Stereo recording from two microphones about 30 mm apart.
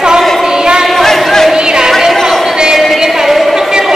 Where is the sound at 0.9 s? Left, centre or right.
Centre.